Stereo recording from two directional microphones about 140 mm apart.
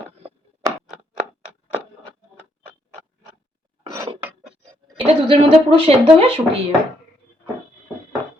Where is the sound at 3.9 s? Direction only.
30° right (ahead or behind).